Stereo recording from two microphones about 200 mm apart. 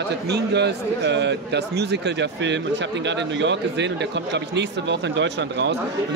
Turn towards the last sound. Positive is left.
turn(degrees=-60)  # may be behind; listen again after turning